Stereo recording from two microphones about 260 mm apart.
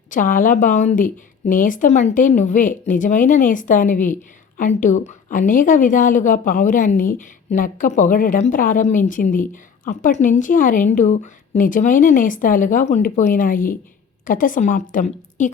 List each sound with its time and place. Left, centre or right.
0.1 s a woman's voice: left